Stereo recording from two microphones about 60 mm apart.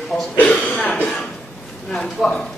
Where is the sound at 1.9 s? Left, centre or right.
Centre.